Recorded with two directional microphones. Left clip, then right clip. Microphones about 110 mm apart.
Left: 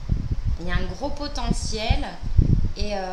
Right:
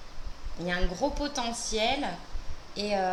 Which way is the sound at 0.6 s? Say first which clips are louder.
Right 1 dB; 15° right (ahead or behind).